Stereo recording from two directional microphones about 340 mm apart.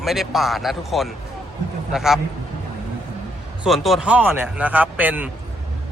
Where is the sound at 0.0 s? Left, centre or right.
Centre.